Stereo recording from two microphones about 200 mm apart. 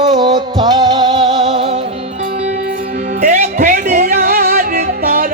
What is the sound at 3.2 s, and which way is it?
Music, 40° right (ahead or behind).